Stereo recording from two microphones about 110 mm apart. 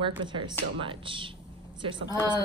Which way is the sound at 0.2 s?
45° right (ahead or behind).